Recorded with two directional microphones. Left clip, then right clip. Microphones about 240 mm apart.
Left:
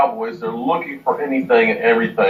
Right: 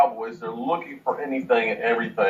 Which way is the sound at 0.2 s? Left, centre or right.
Right.